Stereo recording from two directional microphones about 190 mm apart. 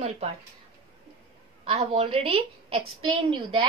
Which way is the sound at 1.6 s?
30° right (ahead or behind).